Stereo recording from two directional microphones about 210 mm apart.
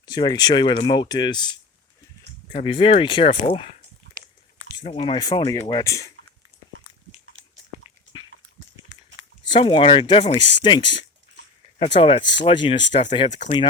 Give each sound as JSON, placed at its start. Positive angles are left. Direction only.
{"t": 0.0, "sound": "speech", "side_deg": 20}
{"t": 2.5, "sound": "speech", "side_deg": 30}
{"t": 4.8, "sound": "speech", "side_deg": 30}
{"t": 9.5, "sound": "speech", "side_deg": 25}
{"t": 11.9, "sound": "speech", "side_deg": 25}